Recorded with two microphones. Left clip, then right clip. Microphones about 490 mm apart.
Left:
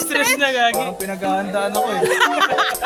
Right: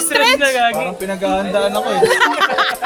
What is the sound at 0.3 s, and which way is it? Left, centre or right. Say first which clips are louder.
Music: right 3 dB; left.